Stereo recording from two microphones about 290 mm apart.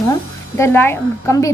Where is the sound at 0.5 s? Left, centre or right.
Centre.